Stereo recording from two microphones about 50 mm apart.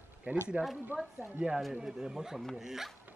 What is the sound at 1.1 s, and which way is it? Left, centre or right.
Speech, right.